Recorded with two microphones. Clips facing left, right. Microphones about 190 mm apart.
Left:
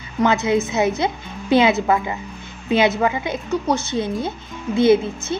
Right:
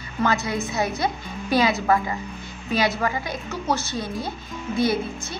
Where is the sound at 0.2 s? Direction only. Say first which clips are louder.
Left 6 dB; 20° left (ahead or behind).